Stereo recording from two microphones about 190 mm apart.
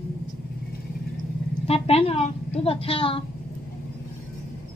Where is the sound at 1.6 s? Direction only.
30° left (ahead or behind).